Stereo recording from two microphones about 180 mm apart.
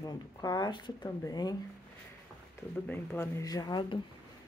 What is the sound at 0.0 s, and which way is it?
Speech, 20° left (ahead or behind).